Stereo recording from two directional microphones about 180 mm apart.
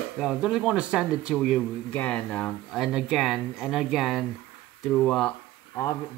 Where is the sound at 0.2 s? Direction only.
5° right (ahead or behind).